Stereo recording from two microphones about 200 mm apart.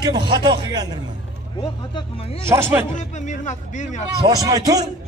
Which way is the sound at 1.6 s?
25° left (ahead or behind).